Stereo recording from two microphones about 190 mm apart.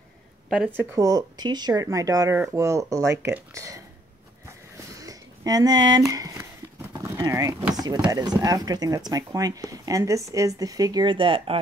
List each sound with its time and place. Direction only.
0.5 s speech: centre (ahead or behind)
0.7 s speech: 15° right (ahead or behind)
4.9 s a sound: 20° right (ahead or behind)
7.7 s speech: 20° right (ahead or behind)